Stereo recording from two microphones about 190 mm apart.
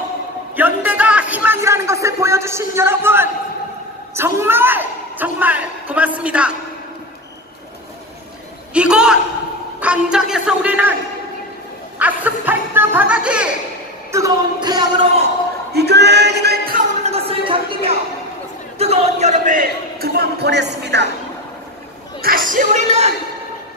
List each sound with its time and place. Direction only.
0.6 s a woman's voice: 10° right (ahead or behind)
8.7 s a man's voice: 5° right (ahead or behind)
12.0 s music: 10° right (ahead or behind)
14.1 s speech: 20° right (ahead or behind)
15.7 s music: 60° right (ahead or behind)
17.0 s a sound: 30° right (ahead or behind)
18.8 s a man's voice: 35° right (ahead or behind); by 21.1 s 65° right (ahead or behind)
22.2 s a man's voice: 50° right (ahead or behind)